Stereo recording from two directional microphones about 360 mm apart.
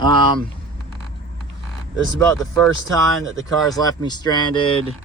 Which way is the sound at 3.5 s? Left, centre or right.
Centre.